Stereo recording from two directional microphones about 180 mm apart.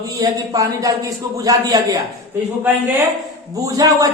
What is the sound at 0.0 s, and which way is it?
A man's voice, 20° right (ahead or behind).